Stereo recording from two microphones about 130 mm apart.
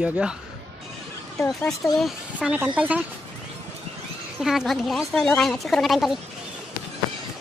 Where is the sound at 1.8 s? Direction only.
Centre (ahead or behind).